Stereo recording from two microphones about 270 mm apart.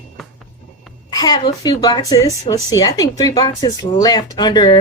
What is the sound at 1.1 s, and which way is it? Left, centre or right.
A woman's voice, centre.